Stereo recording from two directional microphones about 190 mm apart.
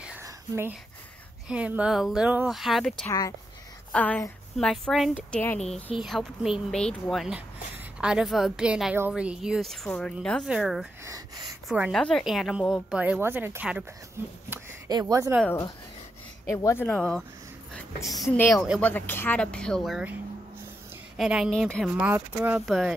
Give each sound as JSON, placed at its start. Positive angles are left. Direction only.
{"t": 0.2, "sound": "whispering", "side_deg": -10}
{"t": 1.5, "sound": "a woman's voice", "side_deg": -5}
{"t": 3.1, "sound": "a woman's voice", "side_deg": 15}
{"t": 11.1, "sound": "speech", "side_deg": -20}
{"t": 11.7, "sound": "a woman's voice", "side_deg": -5}
{"t": 16.4, "sound": "a woman's voice", "side_deg": 15}
{"t": 18.9, "sound": "a woman's voice", "side_deg": 10}
{"t": 21.2, "sound": "a woman's voice", "side_deg": -5}
{"t": 21.9, "sound": "a woman's voice", "side_deg": -10}